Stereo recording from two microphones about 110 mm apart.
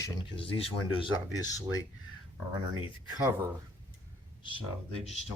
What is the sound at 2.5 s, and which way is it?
Speech, 45° right (ahead or behind).